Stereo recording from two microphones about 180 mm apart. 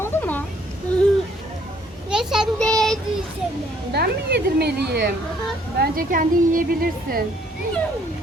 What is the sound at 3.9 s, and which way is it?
Speech, 65° right (ahead or behind).